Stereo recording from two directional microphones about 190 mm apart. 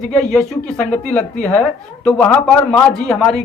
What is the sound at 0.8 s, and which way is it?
Speech, 40° left (ahead or behind).